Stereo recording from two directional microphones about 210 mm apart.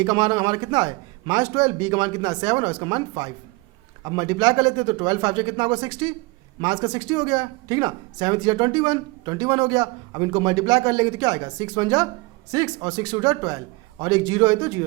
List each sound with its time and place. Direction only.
0.0 s speech: 20° right (ahead or behind)